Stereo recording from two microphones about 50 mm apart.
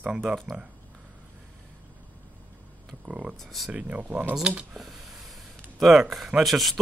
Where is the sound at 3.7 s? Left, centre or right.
Right.